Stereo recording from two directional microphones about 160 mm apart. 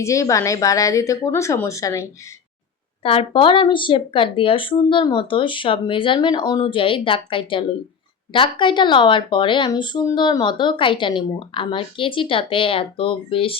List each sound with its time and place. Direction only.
0.0 s speech: 20° left (ahead or behind)
3.0 s speech: 35° left (ahead or behind)